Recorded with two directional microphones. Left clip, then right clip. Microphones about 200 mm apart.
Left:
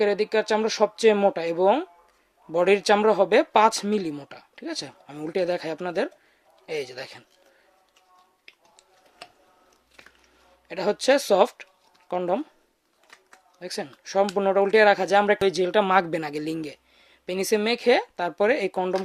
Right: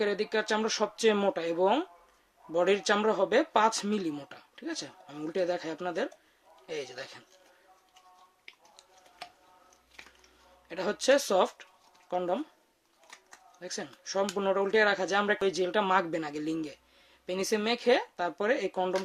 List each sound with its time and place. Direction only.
0.0 s speech: 30° left (ahead or behind)
8.4 s a sound: 10° left (ahead or behind)
10.7 s speech: 30° left (ahead or behind)
13.6 s speech: 35° left (ahead or behind)